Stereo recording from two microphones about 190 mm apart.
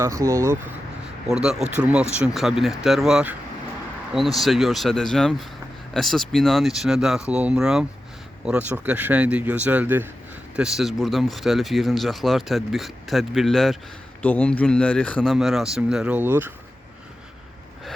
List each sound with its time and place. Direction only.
0.0 s speech: 15° right (ahead or behind)
1.3 s speech: 5° right (ahead or behind)